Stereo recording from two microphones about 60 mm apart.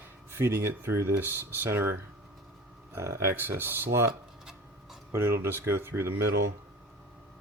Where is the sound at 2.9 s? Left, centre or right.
Right.